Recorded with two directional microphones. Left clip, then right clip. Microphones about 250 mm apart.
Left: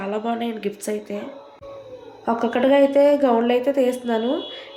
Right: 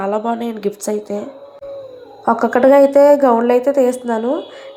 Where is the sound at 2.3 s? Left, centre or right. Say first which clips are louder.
Right 7 dB; centre.